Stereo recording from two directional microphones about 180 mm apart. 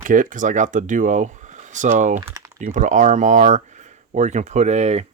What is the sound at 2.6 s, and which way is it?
Speech, 45° right (ahead or behind).